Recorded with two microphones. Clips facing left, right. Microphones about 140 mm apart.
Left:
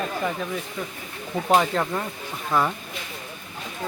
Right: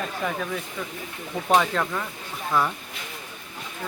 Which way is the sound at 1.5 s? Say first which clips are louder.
Even; 15° left (ahead or behind).